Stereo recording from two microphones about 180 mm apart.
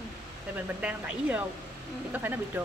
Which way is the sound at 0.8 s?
10° right (ahead or behind).